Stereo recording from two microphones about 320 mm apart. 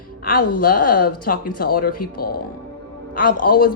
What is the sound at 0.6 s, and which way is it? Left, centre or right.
A woman's voice, left.